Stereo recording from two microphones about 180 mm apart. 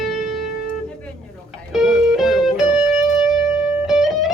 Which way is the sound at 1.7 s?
Centre (ahead or behind).